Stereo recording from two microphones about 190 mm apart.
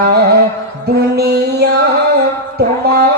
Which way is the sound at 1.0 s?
60° right (ahead or behind).